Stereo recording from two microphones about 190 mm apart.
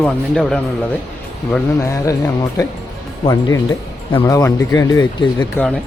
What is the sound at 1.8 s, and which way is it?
Speech, 15° left (ahead or behind).